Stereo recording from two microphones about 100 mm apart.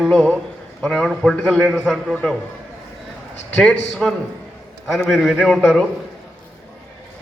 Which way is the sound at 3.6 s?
5° left (ahead or behind).